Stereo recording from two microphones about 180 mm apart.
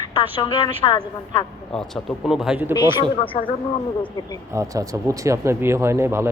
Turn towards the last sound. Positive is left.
turn(degrees=-15)  # may be behind; listen again after turning